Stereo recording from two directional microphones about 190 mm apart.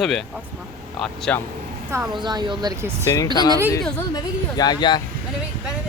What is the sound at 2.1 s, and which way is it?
Speech, 25° right (ahead or behind).